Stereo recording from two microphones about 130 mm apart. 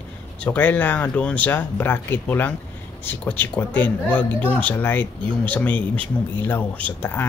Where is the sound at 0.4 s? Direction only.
10° left (ahead or behind).